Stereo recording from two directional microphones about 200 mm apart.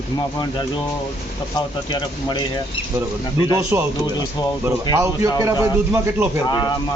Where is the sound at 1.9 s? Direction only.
20° left (ahead or behind).